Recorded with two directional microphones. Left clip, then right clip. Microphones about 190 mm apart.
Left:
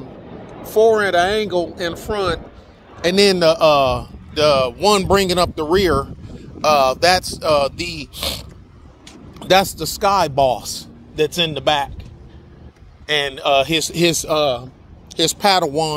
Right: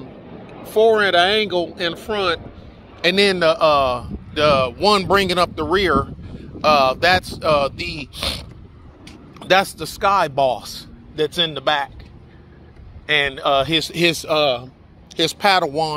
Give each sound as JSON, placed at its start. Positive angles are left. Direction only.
{"t": 0.0, "sound": "a sound", "side_deg": -20}
{"t": 0.7, "sound": "a man's voice", "side_deg": 0}
{"t": 3.3, "sound": "speech", "side_deg": 15}
{"t": 13.0, "sound": "speech", "side_deg": 15}